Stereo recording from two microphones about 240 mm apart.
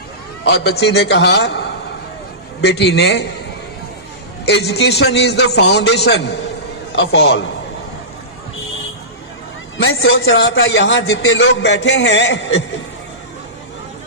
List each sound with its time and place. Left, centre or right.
0.4 s a man's voice: left
4.4 s a man's voice: left
6.9 s a man's voice: left
9.7 s a man's voice: left